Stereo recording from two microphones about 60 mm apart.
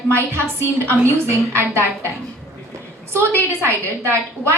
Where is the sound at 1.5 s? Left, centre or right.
Right.